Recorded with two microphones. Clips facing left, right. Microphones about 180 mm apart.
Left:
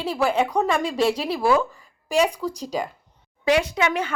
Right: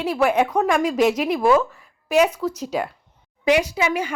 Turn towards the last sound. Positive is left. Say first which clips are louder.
# right 1 dB
turn(degrees=-10)  # may be behind; listen again after turning